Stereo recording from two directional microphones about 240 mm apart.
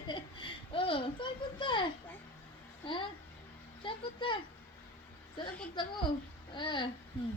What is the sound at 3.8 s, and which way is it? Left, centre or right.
Speech, centre.